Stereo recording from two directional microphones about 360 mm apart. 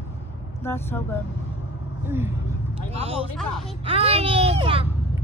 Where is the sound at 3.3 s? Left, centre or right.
Centre.